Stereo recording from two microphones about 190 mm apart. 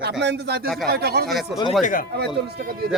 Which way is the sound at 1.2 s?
Centre (ahead or behind).